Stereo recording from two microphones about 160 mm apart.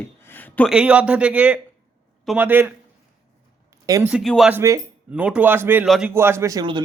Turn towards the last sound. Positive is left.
turn(degrees=-25)  # may be behind; listen again after turning